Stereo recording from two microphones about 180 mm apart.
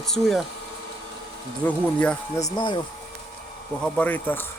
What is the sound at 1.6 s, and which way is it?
Speech, 5° left (ahead or behind).